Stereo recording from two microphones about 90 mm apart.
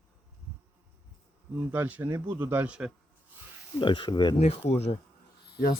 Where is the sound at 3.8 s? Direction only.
65° left (ahead or behind).